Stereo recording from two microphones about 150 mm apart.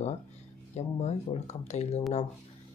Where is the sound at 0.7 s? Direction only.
50° left (ahead or behind).